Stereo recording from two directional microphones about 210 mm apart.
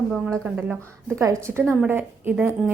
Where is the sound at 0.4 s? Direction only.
5° right (ahead or behind).